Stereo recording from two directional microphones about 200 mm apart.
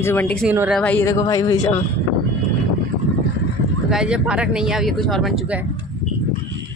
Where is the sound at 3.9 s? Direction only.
5° right (ahead or behind).